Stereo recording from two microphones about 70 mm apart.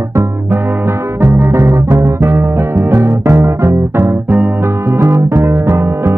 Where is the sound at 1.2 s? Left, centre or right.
Right.